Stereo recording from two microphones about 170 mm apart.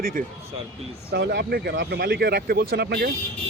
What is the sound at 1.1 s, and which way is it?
Speech, 75° right (ahead or behind).